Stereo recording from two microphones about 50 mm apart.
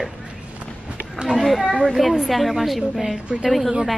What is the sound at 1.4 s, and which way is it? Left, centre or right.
A woman's voice, centre.